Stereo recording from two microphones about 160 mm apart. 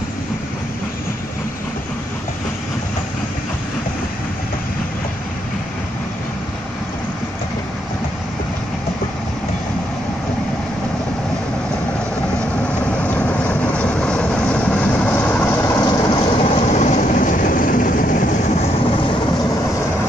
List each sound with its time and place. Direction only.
12.8 s vehicle: 10° left (ahead or behind)
15.8 s vehicle: 30° left (ahead or behind); by 18.9 s 45° left (ahead or behind)